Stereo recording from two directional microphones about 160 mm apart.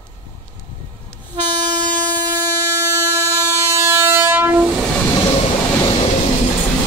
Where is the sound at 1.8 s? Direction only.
25° right (ahead or behind).